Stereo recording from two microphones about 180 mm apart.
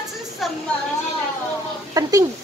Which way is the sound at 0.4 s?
Centre (ahead or behind).